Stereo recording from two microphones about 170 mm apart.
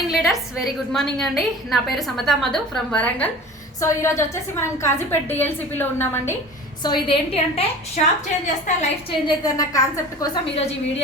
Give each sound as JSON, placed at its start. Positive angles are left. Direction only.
{"t": 0.1, "sound": "a woman's voice", "side_deg": 0}
{"t": 3.8, "sound": "a woman's voice", "side_deg": 15}
{"t": 6.8, "sound": "a woman's voice", "side_deg": 30}
{"t": 8.0, "sound": "a woman's voice", "side_deg": 45}
{"t": 9.2, "sound": "a woman's voice", "side_deg": 20}